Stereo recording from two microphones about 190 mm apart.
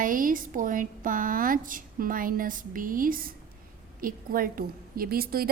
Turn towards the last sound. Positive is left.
turn(degrees=-50)  # may be behind; listen again after turning